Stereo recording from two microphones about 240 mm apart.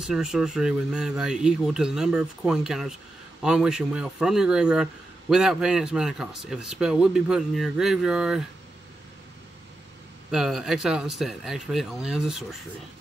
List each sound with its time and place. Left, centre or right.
0.0 s speech: centre
10.3 s speech: centre